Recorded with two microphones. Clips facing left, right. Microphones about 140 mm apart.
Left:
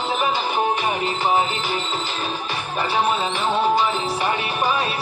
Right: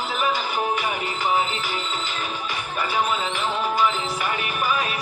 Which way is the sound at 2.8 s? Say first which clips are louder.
Left 3 dB; 30° left (ahead or behind).